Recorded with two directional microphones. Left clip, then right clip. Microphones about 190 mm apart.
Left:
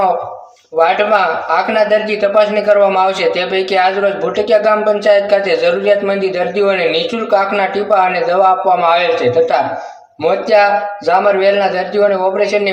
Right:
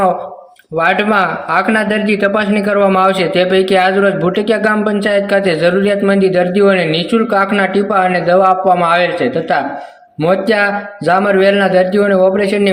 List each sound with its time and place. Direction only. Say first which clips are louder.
0.8 s a man's voice: left 1 dB; 45° right (ahead or behind)
10.2 s a man's voice: left 2 dB; 45° right (ahead or behind)